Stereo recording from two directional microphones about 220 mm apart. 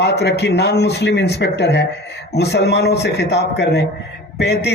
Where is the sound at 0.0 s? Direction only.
50° left (ahead or behind).